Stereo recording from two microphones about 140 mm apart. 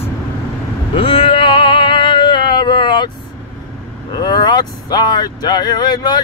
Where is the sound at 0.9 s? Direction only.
40° left (ahead or behind).